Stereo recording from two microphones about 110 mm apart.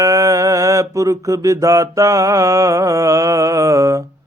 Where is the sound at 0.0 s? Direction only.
30° right (ahead or behind).